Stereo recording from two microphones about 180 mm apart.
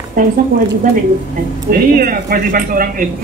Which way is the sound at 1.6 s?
50° right (ahead or behind).